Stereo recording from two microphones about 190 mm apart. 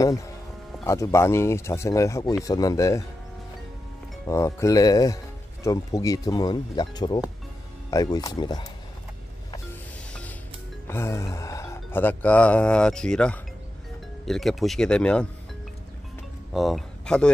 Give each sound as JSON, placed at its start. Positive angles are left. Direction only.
{"t": 0.8, "sound": "speech", "side_deg": 15}
{"t": 4.3, "sound": "speech", "side_deg": 15}
{"t": 10.9, "sound": "speech", "side_deg": 15}
{"t": 16.5, "sound": "speech", "side_deg": 0}